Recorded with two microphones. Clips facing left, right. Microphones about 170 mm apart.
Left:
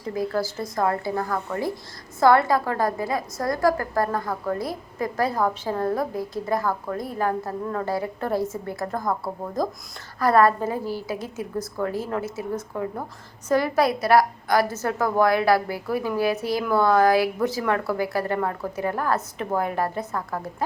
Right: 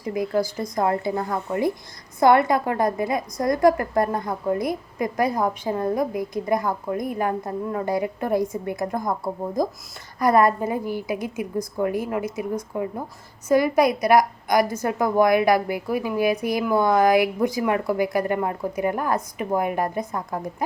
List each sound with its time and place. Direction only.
0.0 s a woman's voice: 15° right (ahead or behind)